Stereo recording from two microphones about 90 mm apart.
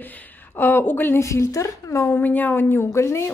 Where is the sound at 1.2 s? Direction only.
35° left (ahead or behind).